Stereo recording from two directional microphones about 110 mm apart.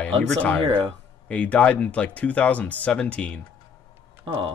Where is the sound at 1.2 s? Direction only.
10° left (ahead or behind).